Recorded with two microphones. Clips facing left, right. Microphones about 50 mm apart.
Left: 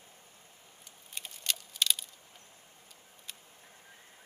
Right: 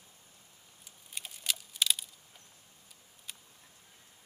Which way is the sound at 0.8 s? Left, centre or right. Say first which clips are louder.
Even; centre.